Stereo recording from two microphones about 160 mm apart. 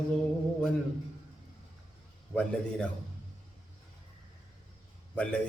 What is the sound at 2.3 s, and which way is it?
Speech, 5° left (ahead or behind).